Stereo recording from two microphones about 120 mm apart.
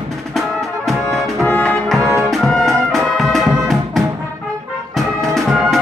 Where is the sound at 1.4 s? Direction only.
10° left (ahead or behind).